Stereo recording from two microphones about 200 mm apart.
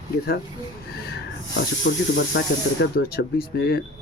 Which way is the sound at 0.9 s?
50° left (ahead or behind).